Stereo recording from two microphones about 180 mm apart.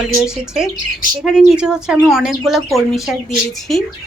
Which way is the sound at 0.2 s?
5° right (ahead or behind).